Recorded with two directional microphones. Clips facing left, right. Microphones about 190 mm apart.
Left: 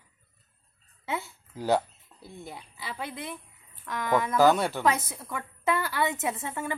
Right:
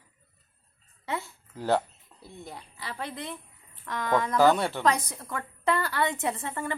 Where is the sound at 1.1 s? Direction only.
5° left (ahead or behind).